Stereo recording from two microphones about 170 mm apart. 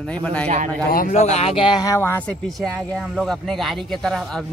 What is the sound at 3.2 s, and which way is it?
Speech, centre (ahead or behind).